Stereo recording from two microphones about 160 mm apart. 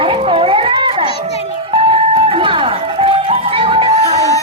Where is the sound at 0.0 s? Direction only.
35° right (ahead or behind).